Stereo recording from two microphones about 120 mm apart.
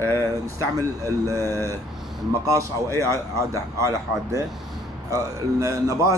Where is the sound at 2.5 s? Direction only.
25° right (ahead or behind).